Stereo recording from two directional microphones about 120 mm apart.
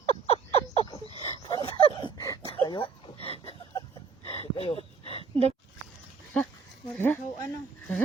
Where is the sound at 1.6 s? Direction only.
40° left (ahead or behind).